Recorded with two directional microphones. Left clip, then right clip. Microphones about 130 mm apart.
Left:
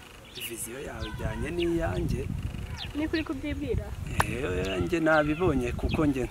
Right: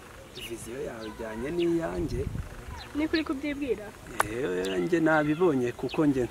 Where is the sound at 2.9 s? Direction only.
15° right (ahead or behind).